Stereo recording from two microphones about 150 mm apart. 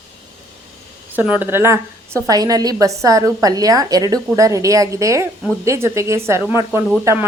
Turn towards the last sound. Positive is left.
turn(degrees=-20)  # may be behind; listen again after turning